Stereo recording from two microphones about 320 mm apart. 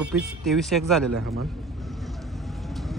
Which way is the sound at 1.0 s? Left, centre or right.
Right.